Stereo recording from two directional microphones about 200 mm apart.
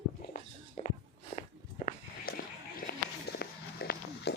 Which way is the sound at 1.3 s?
40° left (ahead or behind).